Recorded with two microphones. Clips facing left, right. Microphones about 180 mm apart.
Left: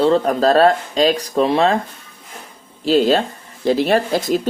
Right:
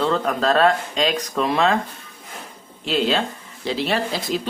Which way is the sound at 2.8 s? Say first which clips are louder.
Left 7 dB; 40° left (ahead or behind).